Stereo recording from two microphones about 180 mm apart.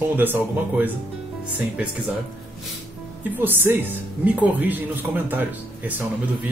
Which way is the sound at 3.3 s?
10° right (ahead or behind).